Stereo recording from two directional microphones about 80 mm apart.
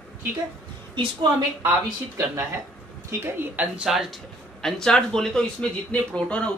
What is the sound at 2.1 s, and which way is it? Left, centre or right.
Speech, right.